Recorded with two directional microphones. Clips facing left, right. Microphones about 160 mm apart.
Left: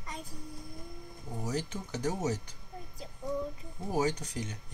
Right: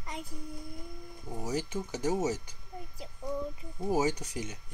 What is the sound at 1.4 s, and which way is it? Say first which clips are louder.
Speech: right 2 dB; 10° right (ahead or behind).